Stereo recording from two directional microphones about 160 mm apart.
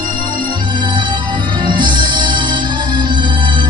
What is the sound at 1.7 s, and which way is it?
Music, 30° right (ahead or behind).